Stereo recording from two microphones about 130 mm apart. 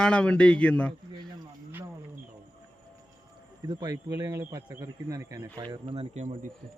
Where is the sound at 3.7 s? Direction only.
35° right (ahead or behind).